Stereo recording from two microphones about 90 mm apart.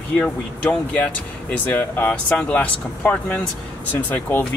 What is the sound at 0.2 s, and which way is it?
Speech, 15° left (ahead or behind).